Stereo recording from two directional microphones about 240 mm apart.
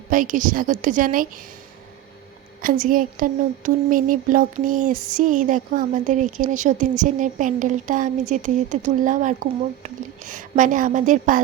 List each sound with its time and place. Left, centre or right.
0.1 s speech: right
2.6 s speech: right